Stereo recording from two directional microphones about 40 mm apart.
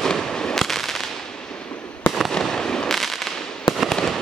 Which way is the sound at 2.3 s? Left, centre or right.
Centre.